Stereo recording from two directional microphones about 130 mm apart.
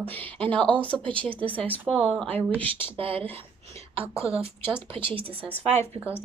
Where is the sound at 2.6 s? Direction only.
45° right (ahead or behind).